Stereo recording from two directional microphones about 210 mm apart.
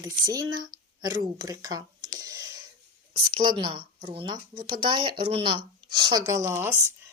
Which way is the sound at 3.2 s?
25° right (ahead or behind).